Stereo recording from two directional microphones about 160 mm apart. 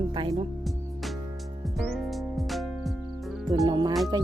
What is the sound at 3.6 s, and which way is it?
Speech, 25° right (ahead or behind).